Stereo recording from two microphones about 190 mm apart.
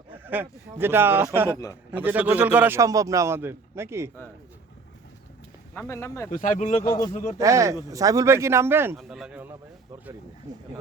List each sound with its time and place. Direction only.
0.1 s a man's voice: 10° right (ahead or behind)
5.7 s speech: 10° left (ahead or behind)
6.3 s speech: 40° left (ahead or behind)
7.3 s a man's voice: 15° right (ahead or behind)